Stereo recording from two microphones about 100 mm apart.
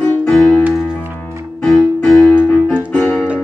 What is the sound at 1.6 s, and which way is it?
Keyboard, 10° left (ahead or behind).